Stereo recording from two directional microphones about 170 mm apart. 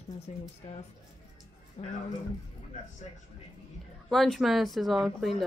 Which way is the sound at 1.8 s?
40° left (ahead or behind).